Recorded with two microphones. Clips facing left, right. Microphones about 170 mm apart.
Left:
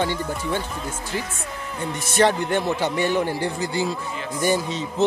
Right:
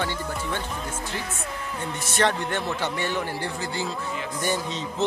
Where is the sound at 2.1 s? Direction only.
10° left (ahead or behind).